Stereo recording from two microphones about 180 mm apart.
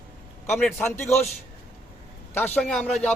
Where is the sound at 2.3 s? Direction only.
10° left (ahead or behind).